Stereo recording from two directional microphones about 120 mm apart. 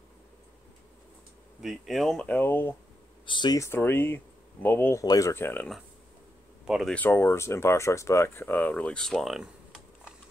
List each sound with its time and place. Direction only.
1.6 s speech: centre (ahead or behind); by 2.7 s 20° left (ahead or behind)
3.3 s speech: 40° left (ahead or behind)
3.5 s speech: 20° left (ahead or behind)
5.0 s speech: 30° left (ahead or behind)
6.6 s speech: 5° right (ahead or behind)
6.9 s speech: 15° left (ahead or behind); by 9.5 s centre (ahead or behind)